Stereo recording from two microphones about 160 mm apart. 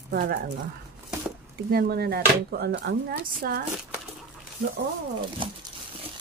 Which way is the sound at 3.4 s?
65° right (ahead or behind).